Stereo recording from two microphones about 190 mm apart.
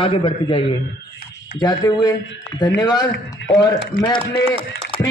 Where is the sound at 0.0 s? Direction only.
25° left (ahead or behind).